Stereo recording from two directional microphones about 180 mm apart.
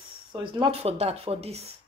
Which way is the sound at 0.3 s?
25° right (ahead or behind).